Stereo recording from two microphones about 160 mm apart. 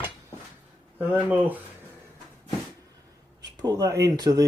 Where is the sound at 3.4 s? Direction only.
25° right (ahead or behind).